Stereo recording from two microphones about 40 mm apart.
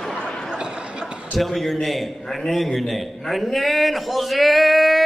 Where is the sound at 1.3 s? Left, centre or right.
Centre.